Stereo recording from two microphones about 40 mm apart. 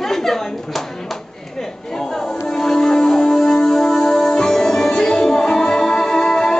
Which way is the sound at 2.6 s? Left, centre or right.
Centre.